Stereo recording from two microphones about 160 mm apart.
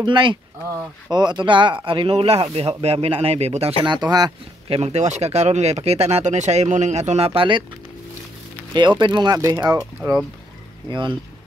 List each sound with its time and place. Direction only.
0.0 s speech: 30° right (ahead or behind)
3.9 s speech: 25° right (ahead or behind)
4.6 s speech: 40° right (ahead or behind)
8.7 s speech: 30° right (ahead or behind)
10.9 s speech: 30° right (ahead or behind)